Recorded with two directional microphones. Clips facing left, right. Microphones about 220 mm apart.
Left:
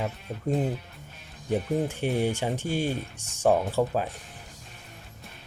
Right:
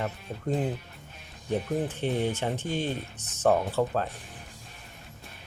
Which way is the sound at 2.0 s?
10° left (ahead or behind).